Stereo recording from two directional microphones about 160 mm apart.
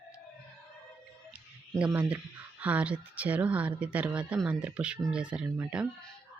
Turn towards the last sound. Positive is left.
turn(degrees=-15)  # may be behind; listen again after turning